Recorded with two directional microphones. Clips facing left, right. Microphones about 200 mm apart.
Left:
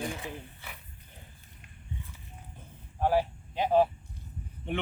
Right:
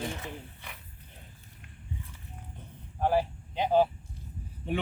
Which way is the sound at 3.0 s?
5° left (ahead or behind).